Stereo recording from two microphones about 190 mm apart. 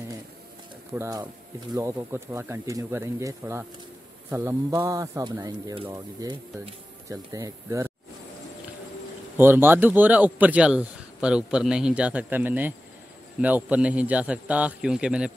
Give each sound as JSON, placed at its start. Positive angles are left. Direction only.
{"t": 0.9, "sound": "a man's voice", "side_deg": -15}
{"t": 9.4, "sound": "a man's voice", "side_deg": -10}